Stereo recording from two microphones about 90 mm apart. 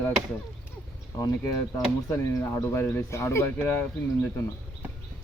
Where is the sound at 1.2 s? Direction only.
35° left (ahead or behind).